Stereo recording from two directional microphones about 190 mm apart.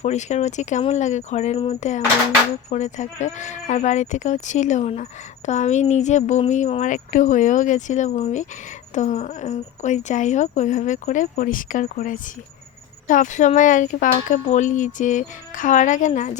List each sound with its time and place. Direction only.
0.0 s a woman's voice: 35° left (ahead or behind)